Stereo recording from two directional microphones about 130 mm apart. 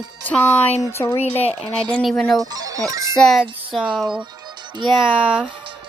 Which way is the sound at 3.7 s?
5° right (ahead or behind).